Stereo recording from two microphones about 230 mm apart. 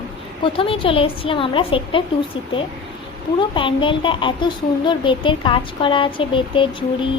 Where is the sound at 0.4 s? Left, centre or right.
Left.